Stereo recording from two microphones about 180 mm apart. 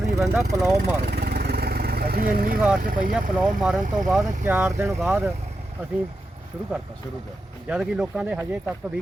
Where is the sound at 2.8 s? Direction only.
50° right (ahead or behind).